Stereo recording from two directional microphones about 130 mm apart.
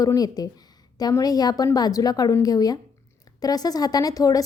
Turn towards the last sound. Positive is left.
turn(degrees=25)  # may be behind; listen again after turning